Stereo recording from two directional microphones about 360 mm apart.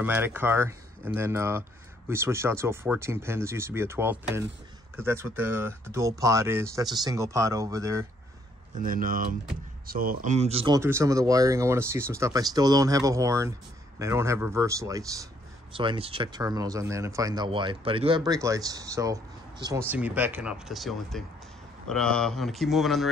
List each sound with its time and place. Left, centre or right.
0.0 s speech: centre
8.7 s speech: right; by 23.0 s centre